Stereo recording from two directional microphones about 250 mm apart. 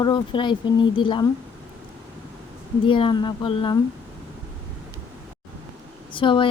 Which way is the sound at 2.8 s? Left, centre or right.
Centre.